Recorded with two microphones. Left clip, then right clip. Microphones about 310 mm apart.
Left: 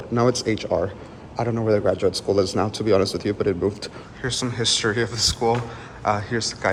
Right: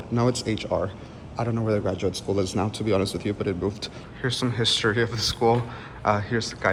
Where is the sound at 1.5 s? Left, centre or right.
Left.